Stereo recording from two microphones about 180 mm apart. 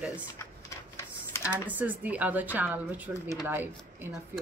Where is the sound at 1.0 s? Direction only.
15° left (ahead or behind).